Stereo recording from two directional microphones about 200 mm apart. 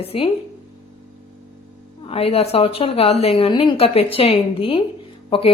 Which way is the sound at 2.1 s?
30° left (ahead or behind).